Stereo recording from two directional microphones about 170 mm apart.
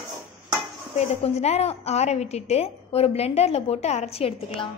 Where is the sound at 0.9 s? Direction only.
40° left (ahead or behind).